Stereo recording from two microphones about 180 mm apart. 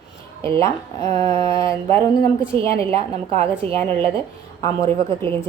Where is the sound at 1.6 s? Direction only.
15° left (ahead or behind).